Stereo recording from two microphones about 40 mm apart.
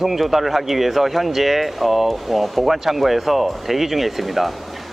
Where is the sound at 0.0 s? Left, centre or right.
Centre.